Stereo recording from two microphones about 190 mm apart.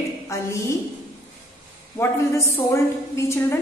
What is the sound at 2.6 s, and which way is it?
A woman's voice, 15° left (ahead or behind).